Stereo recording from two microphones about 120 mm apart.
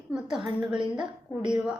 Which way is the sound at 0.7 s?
40° right (ahead or behind).